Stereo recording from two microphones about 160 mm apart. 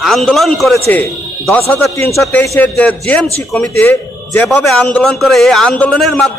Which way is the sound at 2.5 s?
10° left (ahead or behind).